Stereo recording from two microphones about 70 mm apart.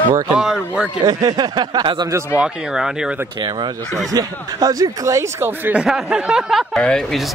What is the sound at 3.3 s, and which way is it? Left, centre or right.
Speech, right.